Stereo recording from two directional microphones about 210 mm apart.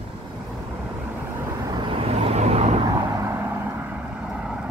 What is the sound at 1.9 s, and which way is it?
Vehicle, 30° right (ahead or behind).